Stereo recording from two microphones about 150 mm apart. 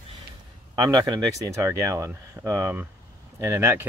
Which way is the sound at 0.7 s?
25° right (ahead or behind).